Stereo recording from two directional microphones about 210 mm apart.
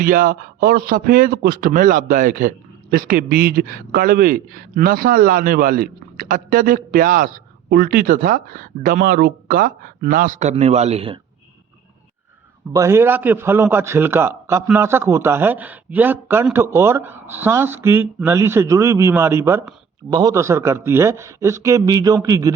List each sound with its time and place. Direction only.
0.0 s a man's voice: 45° right (ahead or behind)
12.7 s a man's voice: 15° right (ahead or behind)